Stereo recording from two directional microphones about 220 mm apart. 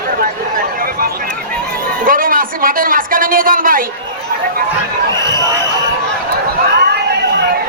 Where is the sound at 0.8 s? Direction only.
40° right (ahead or behind).